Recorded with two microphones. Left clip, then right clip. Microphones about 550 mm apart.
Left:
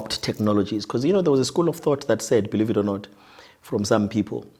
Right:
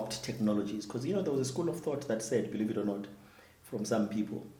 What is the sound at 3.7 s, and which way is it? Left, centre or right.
Speech, left.